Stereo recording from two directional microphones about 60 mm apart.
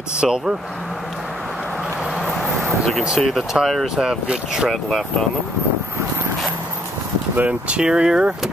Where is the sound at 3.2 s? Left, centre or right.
Centre.